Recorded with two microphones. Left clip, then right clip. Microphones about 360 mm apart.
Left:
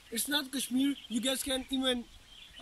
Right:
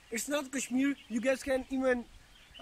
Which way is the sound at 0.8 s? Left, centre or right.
Centre.